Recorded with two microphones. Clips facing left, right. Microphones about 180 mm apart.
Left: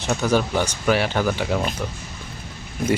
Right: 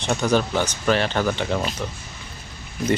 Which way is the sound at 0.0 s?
5° left (ahead or behind).